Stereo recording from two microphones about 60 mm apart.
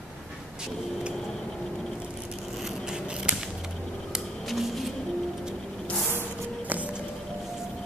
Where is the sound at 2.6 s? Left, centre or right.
Centre.